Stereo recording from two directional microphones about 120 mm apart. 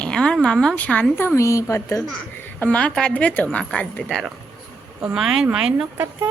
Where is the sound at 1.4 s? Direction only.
25° left (ahead or behind).